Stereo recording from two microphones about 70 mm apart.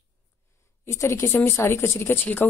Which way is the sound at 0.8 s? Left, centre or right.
Left.